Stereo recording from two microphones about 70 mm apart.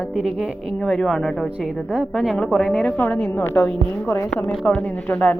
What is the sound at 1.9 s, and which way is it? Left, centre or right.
A woman's voice, centre.